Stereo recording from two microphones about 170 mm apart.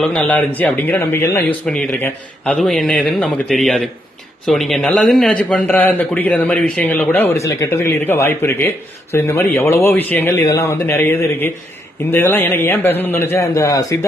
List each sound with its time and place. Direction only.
0.0 s a man's voice: 10° left (ahead or behind)